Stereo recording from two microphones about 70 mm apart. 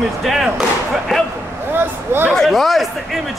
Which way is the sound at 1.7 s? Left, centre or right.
Right.